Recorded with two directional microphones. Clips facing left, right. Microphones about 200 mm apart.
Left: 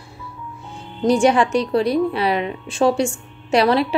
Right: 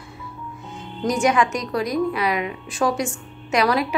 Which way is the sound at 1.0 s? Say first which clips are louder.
Left 4 dB; 30° left (ahead or behind).